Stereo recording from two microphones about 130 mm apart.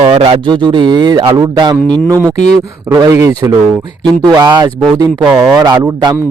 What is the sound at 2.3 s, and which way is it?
Speech, 65° left (ahead or behind).